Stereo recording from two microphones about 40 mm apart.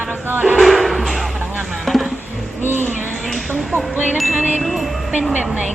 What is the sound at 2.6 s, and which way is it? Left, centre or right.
Music, right.